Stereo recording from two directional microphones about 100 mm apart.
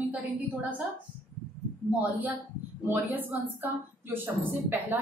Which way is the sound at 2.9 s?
20° right (ahead or behind).